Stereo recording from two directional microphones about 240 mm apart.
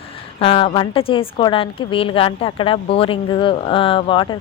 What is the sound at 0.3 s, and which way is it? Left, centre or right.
A woman's voice, left.